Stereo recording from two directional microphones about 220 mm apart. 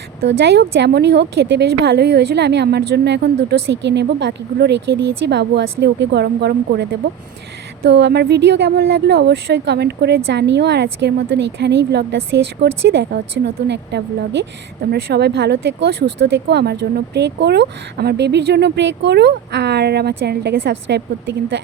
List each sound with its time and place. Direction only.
0.3 s speech: 50° right (ahead or behind)